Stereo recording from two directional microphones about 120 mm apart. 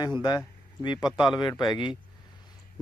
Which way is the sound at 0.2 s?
35° left (ahead or behind).